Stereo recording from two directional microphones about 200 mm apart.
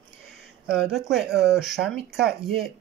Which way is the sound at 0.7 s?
Centre (ahead or behind).